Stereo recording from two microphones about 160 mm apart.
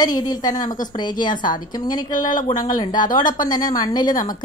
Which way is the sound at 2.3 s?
55° left (ahead or behind).